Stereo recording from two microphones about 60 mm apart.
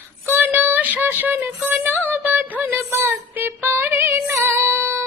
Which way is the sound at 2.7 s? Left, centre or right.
Right.